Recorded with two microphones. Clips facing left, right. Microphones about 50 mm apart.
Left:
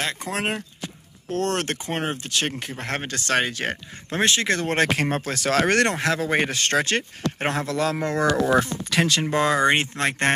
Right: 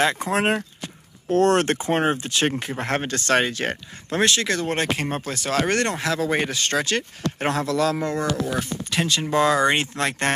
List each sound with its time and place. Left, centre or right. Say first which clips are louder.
0.0 s speech: right 6 dB; centre
4.1 s speech: right 1 dB; left
4.7 s speech: left 3 dB; left
5.6 s speech: left 2 dB; left
5.9 s speech: left 1 dB; left
6.5 s speech: left 1 dB; left
8.5 s speech: left 6 dB; left
9.2 s speech: right 4 dB; left